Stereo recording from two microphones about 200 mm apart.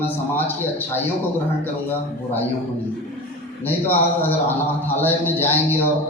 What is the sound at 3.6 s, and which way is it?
A man's voice, 10° left (ahead or behind).